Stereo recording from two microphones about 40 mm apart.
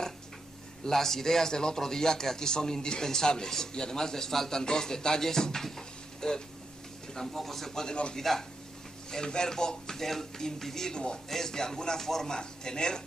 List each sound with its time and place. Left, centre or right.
0.8 s a man's voice: centre
7.9 s a man's voice: left
8.2 s a man's voice: centre